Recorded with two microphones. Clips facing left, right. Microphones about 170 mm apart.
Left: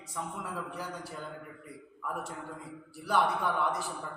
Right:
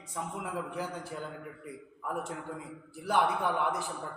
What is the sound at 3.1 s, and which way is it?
Speech, 15° right (ahead or behind).